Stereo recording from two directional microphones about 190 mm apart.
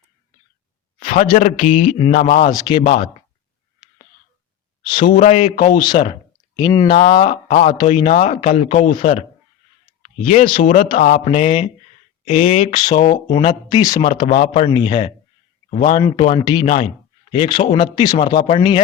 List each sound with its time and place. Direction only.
1.1 s a man's voice: 40° left (ahead or behind)
4.8 s speech: 25° left (ahead or behind)
5.1 s a man's voice: 35° left (ahead or behind)
5.7 s a man's voice: 25° left (ahead or behind)
10.2 s a man's voice: 40° left (ahead or behind)